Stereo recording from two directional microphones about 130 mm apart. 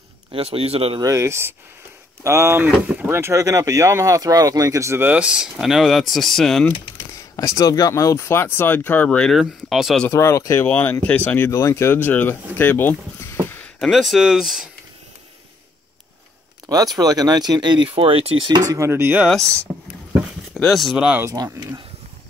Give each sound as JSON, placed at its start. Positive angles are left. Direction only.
{"t": 0.3, "sound": "a man's voice", "side_deg": -50}
{"t": 1.0, "sound": "speech", "side_deg": -25}
{"t": 7.1, "sound": "speech", "side_deg": 25}
{"t": 10.0, "sound": "speech", "side_deg": 20}
{"t": 13.7, "sound": "speech", "side_deg": 0}
{"t": 16.6, "sound": "speech", "side_deg": -30}
{"t": 18.7, "sound": "speech", "side_deg": -20}
{"t": 19.2, "sound": "speech", "side_deg": 5}
{"t": 21.2, "sound": "speech", "side_deg": -25}